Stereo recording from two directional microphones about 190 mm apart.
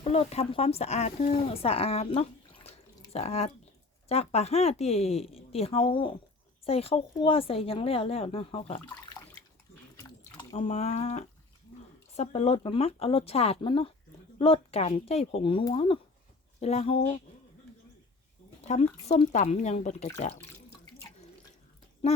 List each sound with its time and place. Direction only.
0.0 s speech: 35° left (ahead or behind)
10.0 s a sound: 25° left (ahead or behind)
12.1 s speech: 35° left (ahead or behind)
18.7 s speech: 40° left (ahead or behind)
22.0 s speech: 35° left (ahead or behind)